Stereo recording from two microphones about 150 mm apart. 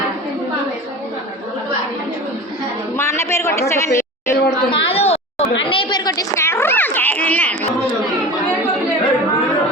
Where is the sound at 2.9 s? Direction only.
15° left (ahead or behind).